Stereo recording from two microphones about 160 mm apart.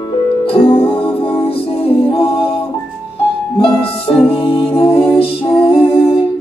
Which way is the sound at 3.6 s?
35° left (ahead or behind).